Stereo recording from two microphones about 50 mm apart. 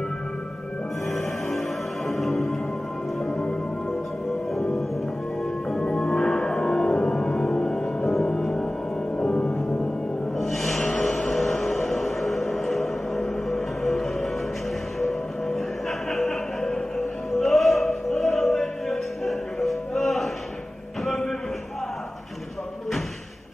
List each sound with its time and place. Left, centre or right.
2.0 s music: centre
4.6 s music: centre
10.3 s music: centre
21.0 s a sound: centre